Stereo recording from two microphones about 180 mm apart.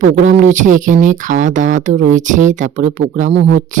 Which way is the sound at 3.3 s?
75° right (ahead or behind).